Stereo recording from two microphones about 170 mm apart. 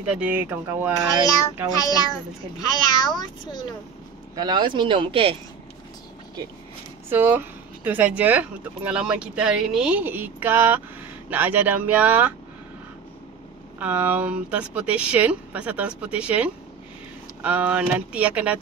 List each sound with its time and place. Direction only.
0.0 s speech: 10° right (ahead or behind)
1.8 s speech: 20° left (ahead or behind)
4.4 s speech: 25° right (ahead or behind)
7.1 s speech: 10° right (ahead or behind)
13.7 s speech: 10° right (ahead or behind)